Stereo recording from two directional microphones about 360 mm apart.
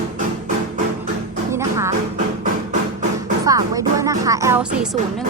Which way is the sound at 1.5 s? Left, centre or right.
Centre.